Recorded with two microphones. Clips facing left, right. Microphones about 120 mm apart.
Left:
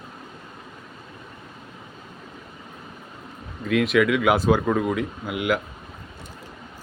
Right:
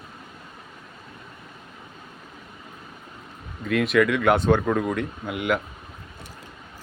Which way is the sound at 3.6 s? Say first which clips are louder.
Left 1 dB; centre (ahead or behind).